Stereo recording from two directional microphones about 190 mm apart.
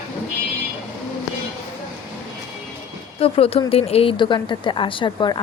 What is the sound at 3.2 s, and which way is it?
A woman's voice, 30° left (ahead or behind).